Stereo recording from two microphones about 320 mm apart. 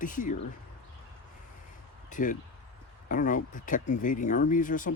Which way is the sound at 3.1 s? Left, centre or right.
Left.